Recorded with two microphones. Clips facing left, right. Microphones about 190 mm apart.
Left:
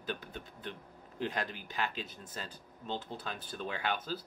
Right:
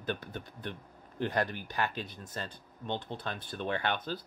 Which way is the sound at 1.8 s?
50° right (ahead or behind).